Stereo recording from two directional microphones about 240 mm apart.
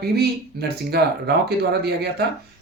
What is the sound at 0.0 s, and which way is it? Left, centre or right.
Speech, right.